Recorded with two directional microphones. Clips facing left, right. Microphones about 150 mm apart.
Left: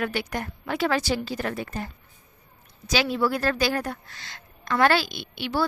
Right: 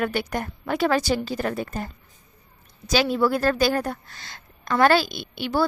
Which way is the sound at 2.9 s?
45° right (ahead or behind).